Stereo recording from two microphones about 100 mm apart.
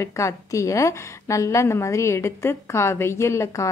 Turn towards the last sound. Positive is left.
turn(degrees=30)  # may be behind; listen again after turning